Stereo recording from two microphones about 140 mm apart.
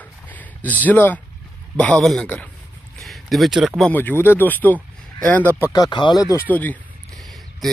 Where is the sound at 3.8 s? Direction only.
15° left (ahead or behind).